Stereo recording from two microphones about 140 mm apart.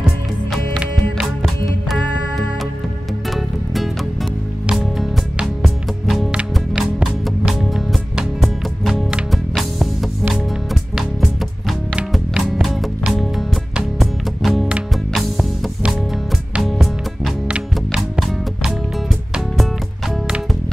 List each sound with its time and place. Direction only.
0.0 s music: 5° right (ahead or behind)